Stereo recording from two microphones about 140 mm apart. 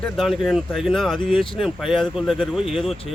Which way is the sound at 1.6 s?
Centre (ahead or behind).